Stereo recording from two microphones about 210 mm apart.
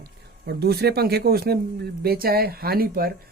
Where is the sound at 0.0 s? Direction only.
50° right (ahead or behind).